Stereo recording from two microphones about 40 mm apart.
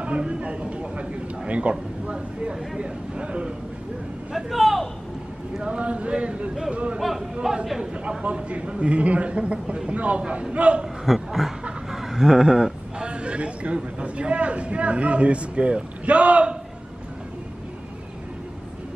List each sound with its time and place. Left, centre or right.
0.0 s speech: right
4.3 s a man's voice: centre
5.6 s speech: right
7.0 s a man's voice: centre
7.8 s speech: right
11.1 s a sound: centre
13.1 s speech: right